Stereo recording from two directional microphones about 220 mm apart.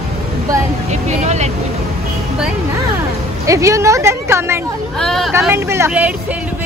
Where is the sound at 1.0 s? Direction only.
30° right (ahead or behind).